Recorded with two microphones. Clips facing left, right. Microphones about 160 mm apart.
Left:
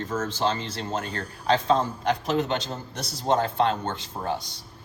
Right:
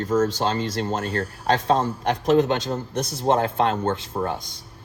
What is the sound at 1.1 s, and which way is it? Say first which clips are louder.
A man's voice: right 2 dB; 55° right (ahead or behind).